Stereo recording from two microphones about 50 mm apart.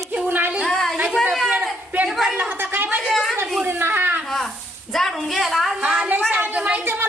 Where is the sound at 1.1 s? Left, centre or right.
Centre.